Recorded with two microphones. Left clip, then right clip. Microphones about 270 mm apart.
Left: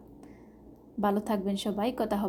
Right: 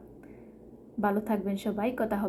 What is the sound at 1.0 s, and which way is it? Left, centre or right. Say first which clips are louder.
A woman's voice: even; left.